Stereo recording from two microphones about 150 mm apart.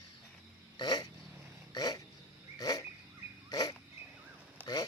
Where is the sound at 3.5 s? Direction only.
25° left (ahead or behind).